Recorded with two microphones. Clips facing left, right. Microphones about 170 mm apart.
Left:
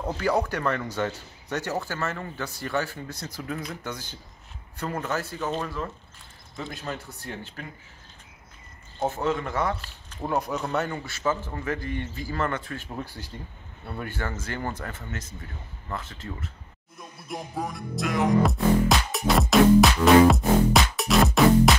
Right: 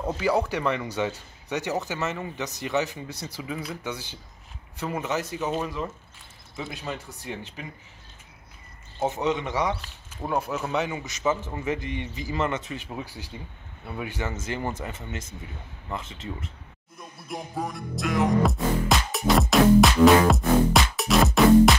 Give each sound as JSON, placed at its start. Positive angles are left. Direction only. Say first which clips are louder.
{"t": 0.0, "sound": "speech", "louder": "right 1 dB", "side_deg": -5}
{"t": 9.3, "sound": "speech", "louder": "right 1 dB", "side_deg": 0}
{"t": 14.3, "sound": "speech", "louder": "right 2 dB", "side_deg": -25}
{"t": 17.0, "sound": "music", "louder": "even", "side_deg": 0}